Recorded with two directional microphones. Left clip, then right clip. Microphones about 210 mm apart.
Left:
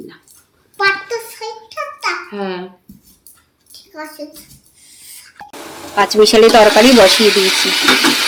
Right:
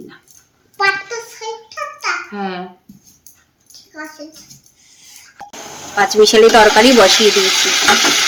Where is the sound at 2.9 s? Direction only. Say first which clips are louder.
Left 1 dB; centre (ahead or behind).